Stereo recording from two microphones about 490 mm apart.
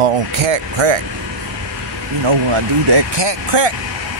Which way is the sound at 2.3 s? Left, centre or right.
Right.